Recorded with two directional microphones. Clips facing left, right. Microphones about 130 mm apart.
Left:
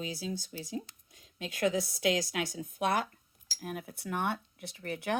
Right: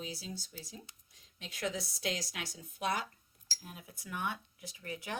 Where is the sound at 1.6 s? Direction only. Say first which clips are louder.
Left 8 dB; 55° left (ahead or behind).